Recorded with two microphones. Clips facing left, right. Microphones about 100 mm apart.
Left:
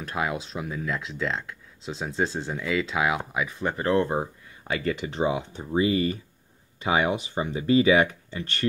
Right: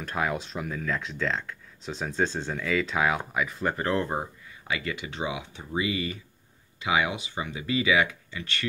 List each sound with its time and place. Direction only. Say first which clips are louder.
0.1 s speech: even; 15° left (ahead or behind)
2.1 s speech: even; 15° left (ahead or behind)
3.8 s speech: left 6 dB; 30° left (ahead or behind)
4.6 s speech: left 5 dB; 45° left (ahead or behind)